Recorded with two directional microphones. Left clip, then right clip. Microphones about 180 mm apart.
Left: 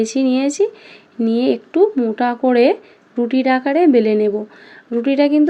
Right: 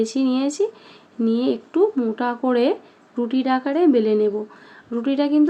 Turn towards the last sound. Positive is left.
turn(degrees=15)  # may be behind; listen again after turning